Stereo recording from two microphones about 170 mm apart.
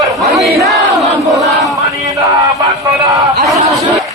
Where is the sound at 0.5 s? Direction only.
Centre (ahead or behind).